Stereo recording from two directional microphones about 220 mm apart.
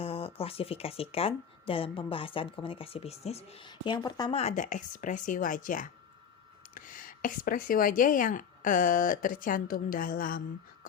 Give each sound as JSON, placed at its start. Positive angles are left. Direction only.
{"t": 0.0, "sound": "speech", "side_deg": 25}